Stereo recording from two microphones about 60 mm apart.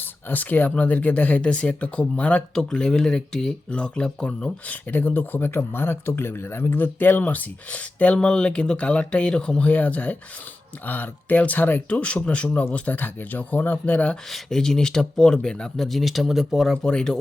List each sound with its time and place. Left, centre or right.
0.0 s speech: left
11.9 s speech: centre
14.3 s speech: centre
16.7 s speech: centre